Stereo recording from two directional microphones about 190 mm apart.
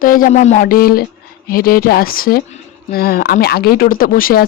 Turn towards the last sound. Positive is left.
turn(degrees=50)  # may be behind; listen again after turning